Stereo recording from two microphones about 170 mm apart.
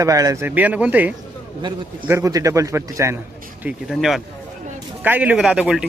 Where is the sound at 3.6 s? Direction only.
Centre (ahead or behind).